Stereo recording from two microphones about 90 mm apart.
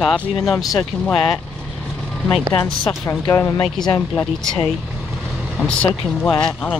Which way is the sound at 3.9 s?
10° left (ahead or behind).